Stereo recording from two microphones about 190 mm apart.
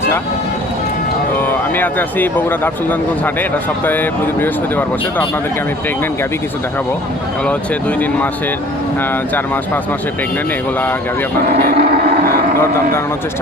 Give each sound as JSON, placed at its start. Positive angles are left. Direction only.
{"t": 1.7, "sound": "speech", "side_deg": 10}
{"t": 3.8, "sound": "speech", "side_deg": 10}
{"t": 7.4, "sound": "speech", "side_deg": 5}
{"t": 11.5, "sound": "vehicle", "side_deg": -55}